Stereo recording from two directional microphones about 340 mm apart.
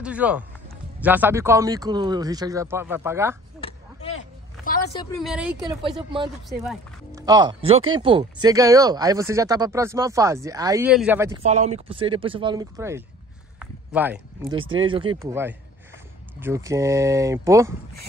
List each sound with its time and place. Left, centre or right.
0.0 s speech: centre
4.6 s a sound: left
5.2 s speech: centre
5.9 s speech: centre
6.6 s music: centre
7.2 s speech: centre
11.4 s speech: centre
13.6 s a sound: centre
14.8 s speech: centre